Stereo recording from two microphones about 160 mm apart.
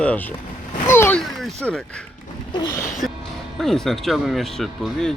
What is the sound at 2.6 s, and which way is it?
Speech, 20° left (ahead or behind).